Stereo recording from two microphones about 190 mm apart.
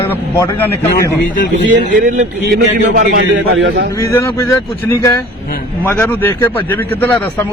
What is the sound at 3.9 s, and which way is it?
A man's voice, 15° left (ahead or behind).